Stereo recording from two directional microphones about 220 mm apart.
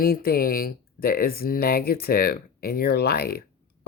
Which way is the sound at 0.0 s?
45° left (ahead or behind).